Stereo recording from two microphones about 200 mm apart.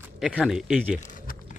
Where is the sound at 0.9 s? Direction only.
40° left (ahead or behind).